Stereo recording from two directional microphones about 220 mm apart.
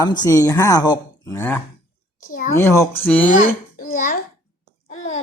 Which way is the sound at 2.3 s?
40° left (ahead or behind).